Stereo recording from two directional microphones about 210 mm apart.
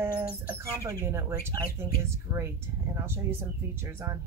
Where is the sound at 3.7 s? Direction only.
10° right (ahead or behind).